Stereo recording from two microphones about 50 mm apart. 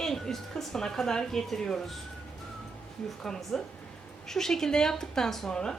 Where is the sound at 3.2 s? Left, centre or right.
Centre.